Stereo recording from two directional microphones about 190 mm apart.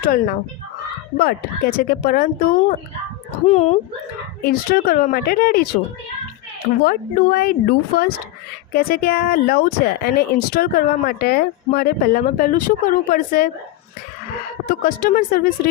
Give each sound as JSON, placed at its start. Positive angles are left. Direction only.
{"t": 0.0, "sound": "speech", "side_deg": 50}
{"t": 3.4, "sound": "speech", "side_deg": 35}
{"t": 4.4, "sound": "speech", "side_deg": 50}
{"t": 6.8, "sound": "speech", "side_deg": 50}
{"t": 14.7, "sound": "speech", "side_deg": 45}